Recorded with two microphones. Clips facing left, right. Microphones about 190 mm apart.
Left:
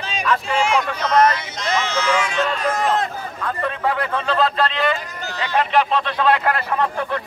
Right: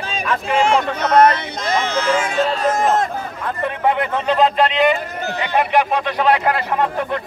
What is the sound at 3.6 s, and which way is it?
Speech, 20° right (ahead or behind).